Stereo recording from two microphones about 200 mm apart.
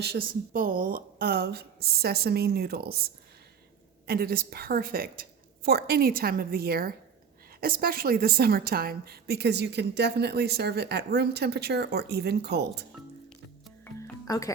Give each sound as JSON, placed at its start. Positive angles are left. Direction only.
{"t": 0.0, "sound": "speech", "side_deg": -50}
{"t": 4.0, "sound": "a woman's voice", "side_deg": -50}
{"t": 13.8, "sound": "music", "side_deg": 15}